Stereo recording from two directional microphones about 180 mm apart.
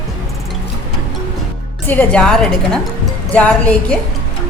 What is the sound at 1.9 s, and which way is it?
A woman's voice, 10° left (ahead or behind).